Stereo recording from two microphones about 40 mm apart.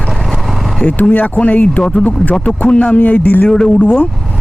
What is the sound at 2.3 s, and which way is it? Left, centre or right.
Speech, centre.